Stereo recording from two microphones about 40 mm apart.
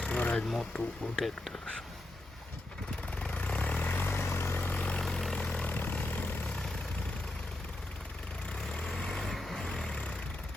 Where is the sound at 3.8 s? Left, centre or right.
Left.